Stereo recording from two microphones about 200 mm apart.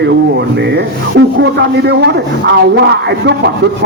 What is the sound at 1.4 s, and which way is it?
Speech, 60° right (ahead or behind).